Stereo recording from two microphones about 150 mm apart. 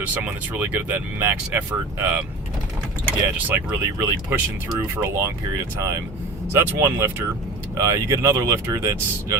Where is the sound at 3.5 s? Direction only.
15° right (ahead or behind).